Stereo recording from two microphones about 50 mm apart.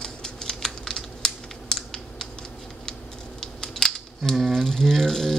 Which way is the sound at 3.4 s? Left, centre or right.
Centre.